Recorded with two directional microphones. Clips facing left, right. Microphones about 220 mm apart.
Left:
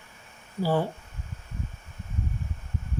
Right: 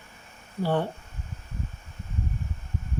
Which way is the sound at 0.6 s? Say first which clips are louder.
Left 1 dB; 5° left (ahead or behind).